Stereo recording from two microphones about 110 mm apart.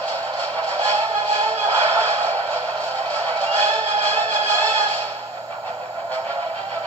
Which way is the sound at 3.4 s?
15° left (ahead or behind).